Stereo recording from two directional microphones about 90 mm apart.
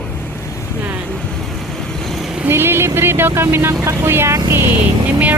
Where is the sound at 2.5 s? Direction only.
25° right (ahead or behind).